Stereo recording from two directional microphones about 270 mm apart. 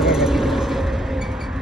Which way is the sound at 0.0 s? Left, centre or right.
Centre.